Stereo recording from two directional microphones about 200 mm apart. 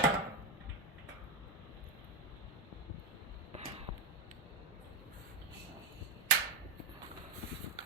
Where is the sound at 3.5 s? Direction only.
30° right (ahead or behind).